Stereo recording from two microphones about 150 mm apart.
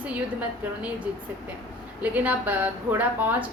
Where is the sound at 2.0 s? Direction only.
10° right (ahead or behind).